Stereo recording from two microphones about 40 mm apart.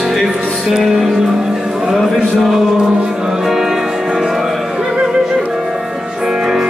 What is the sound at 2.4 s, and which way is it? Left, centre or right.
Music, centre.